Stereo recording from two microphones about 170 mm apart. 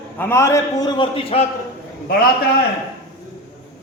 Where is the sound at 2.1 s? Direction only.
60° left (ahead or behind).